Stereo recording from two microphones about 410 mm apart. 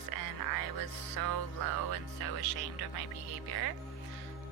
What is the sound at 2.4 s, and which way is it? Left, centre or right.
Speech, left.